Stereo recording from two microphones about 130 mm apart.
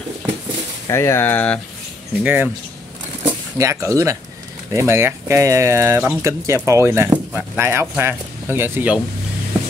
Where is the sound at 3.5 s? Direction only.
25° right (ahead or behind).